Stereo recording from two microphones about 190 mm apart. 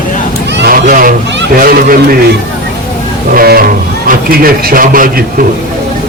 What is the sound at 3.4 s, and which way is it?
A man's voice, 50° right (ahead or behind).